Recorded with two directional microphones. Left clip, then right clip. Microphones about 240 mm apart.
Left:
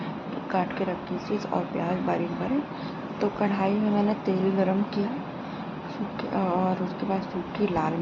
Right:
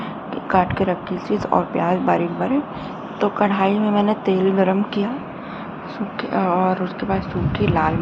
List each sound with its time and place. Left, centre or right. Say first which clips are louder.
0.5 s a woman's voice: right 10 dB; centre
6.3 s a woman's voice: right 8 dB; centre